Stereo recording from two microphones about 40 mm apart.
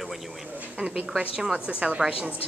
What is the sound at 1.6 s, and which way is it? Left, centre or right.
Speech, right.